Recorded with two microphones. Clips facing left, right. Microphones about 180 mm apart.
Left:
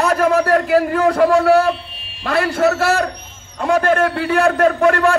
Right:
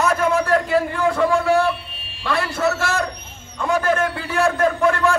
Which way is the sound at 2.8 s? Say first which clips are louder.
Left 6 dB; 35° left (ahead or behind).